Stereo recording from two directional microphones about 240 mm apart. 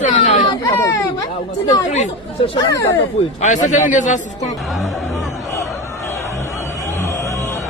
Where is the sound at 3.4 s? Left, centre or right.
Left.